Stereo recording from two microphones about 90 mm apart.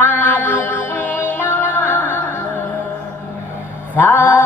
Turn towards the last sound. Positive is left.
turn(degrees=20)  # may be behind; listen again after turning